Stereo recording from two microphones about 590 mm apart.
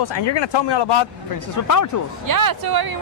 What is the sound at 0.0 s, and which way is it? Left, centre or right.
Speech, left.